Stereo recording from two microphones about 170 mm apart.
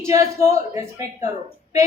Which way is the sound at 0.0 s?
15° right (ahead or behind).